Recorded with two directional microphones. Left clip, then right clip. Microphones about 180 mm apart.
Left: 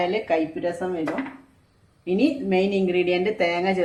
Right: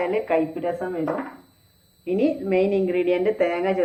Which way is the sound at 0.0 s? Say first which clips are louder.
Right 1 dB; 65° left (ahead or behind).